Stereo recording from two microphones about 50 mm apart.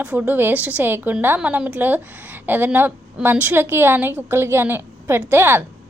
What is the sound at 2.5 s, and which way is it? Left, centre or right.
Speech, right.